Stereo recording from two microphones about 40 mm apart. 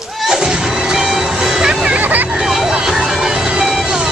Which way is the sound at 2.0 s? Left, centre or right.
Right.